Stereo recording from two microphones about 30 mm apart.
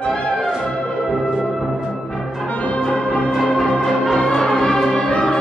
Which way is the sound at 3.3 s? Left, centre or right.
Centre.